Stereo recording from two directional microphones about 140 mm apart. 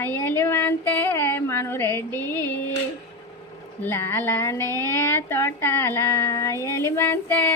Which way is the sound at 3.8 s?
15° left (ahead or behind).